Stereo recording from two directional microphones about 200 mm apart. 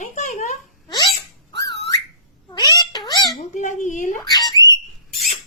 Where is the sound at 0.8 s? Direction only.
20° left (ahead or behind).